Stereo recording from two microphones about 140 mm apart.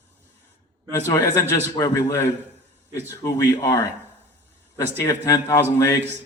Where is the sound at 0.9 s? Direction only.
20° left (ahead or behind).